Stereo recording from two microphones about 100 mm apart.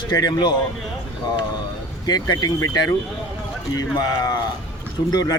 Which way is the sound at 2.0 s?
40° left (ahead or behind).